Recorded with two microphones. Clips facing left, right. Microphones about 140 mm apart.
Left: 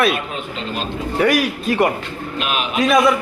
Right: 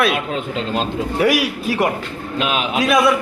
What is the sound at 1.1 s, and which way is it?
A man's voice, 5° right (ahead or behind).